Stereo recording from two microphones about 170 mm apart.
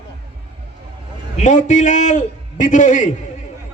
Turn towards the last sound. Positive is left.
turn(degrees=45)  # may be behind; listen again after turning